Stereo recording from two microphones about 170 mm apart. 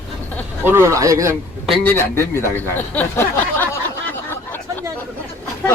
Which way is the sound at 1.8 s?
10° left (ahead or behind).